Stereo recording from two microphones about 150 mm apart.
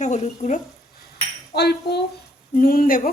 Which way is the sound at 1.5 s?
90° left.